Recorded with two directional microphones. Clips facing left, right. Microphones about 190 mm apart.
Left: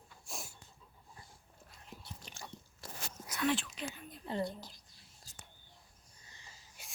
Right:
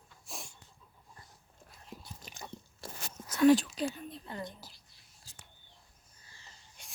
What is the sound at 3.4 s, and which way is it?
Whispering, 35° right (ahead or behind).